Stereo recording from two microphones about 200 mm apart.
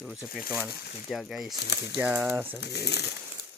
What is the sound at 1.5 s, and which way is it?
Speech, 55° left (ahead or behind).